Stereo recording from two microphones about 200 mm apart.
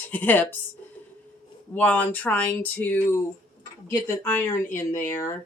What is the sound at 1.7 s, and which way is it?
Speech, 10° left (ahead or behind).